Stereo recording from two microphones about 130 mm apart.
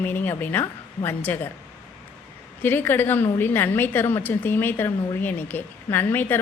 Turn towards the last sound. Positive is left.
turn(degrees=15)  # may be behind; listen again after turning